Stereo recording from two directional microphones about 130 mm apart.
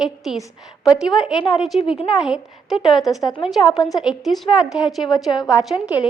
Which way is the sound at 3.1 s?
25° left (ahead or behind).